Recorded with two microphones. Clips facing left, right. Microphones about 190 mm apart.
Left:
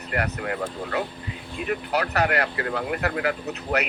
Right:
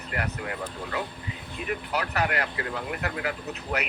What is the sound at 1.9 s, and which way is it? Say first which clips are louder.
Speech: left 5 dB; 70° left (ahead or behind).